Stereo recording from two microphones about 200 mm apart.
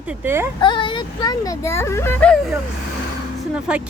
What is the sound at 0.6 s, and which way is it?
Speech, 25° left (ahead or behind).